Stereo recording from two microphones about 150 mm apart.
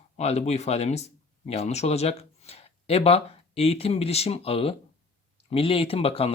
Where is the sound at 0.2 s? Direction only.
45° left (ahead or behind).